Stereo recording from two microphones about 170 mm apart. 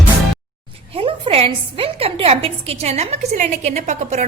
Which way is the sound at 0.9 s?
35° right (ahead or behind).